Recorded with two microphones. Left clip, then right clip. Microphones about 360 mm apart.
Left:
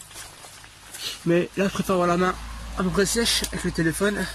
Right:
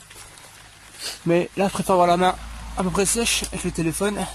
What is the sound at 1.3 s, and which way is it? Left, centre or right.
Speech, centre.